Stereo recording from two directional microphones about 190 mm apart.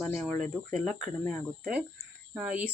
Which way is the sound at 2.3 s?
5° right (ahead or behind).